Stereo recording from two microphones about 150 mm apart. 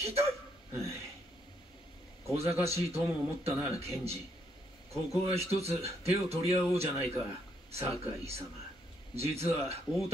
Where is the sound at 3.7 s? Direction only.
45° right (ahead or behind).